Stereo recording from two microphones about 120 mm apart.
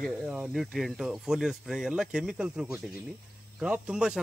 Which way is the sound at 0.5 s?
Centre (ahead or behind).